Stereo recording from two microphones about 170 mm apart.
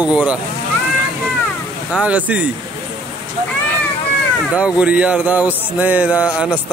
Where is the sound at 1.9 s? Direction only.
5° right (ahead or behind).